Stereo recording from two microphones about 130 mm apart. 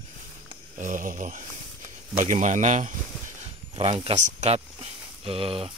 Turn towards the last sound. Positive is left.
turn(degrees=-45)  # may be behind; listen again after turning